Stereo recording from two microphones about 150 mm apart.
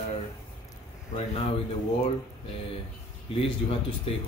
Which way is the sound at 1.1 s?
40° left (ahead or behind).